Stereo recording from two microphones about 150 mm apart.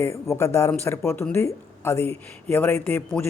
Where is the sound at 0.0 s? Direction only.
20° left (ahead or behind).